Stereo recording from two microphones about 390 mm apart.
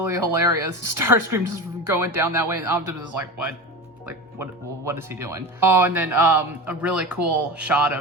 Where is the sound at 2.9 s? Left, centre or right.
Right.